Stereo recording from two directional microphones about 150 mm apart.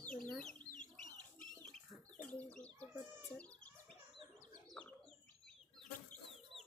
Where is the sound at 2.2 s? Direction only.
5° left (ahead or behind).